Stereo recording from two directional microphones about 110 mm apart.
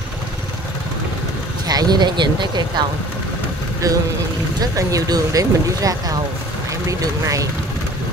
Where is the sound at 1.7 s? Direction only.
40° right (ahead or behind).